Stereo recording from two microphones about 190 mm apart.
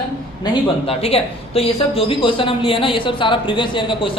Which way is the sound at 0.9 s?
30° left (ahead or behind).